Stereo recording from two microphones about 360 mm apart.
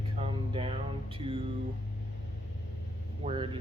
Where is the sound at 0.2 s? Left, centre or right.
Centre.